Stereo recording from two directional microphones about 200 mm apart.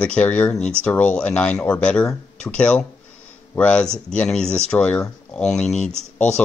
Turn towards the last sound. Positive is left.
turn(degrees=35)  # may be behind; listen again after turning